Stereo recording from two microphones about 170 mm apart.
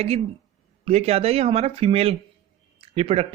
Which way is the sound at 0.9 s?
35° right (ahead or behind).